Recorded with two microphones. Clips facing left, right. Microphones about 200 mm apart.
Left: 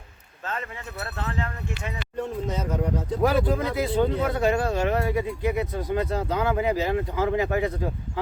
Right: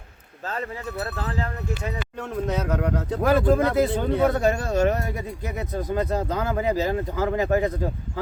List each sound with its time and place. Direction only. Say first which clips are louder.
0.4 s speech: right 3 dB; 35° right (ahead or behind)
2.1 s speech: right 1 dB; 75° right (ahead or behind); by 7.7 s 40° right (ahead or behind)